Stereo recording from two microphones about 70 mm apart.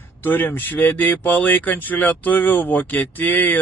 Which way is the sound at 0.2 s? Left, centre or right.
Left.